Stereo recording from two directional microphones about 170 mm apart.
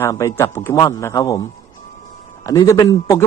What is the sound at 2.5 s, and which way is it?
Speech, 20° left (ahead or behind).